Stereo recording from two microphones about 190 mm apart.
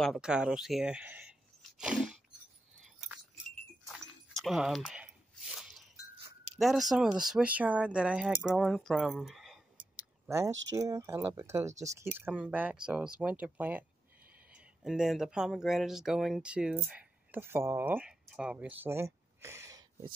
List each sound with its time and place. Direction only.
0.0 s speech: centre (ahead or behind)
1.6 s sneeze: 5° right (ahead or behind)
3.8 s dog: centre (ahead or behind)
6.6 s speech: centre (ahead or behind)
9.9 s a sound: 10° right (ahead or behind)
10.5 s speech: 75° right (ahead or behind)
10.8 s speech: 20° right (ahead or behind)